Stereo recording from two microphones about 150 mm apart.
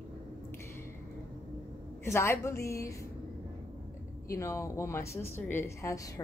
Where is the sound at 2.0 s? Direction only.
20° left (ahead or behind).